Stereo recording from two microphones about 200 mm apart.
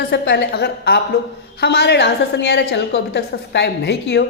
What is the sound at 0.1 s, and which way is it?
A woman's voice, 60° left (ahead or behind).